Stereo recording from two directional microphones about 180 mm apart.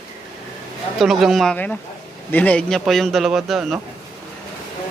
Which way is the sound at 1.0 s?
Centre (ahead or behind).